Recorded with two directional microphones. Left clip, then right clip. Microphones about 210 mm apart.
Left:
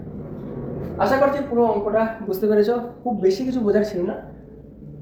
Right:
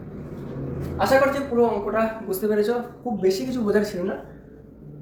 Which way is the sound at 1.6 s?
15° left (ahead or behind).